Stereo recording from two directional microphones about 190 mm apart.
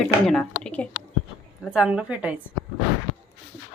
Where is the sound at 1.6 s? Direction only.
5° right (ahead or behind).